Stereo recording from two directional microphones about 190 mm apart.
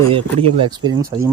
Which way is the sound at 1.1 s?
25° right (ahead or behind).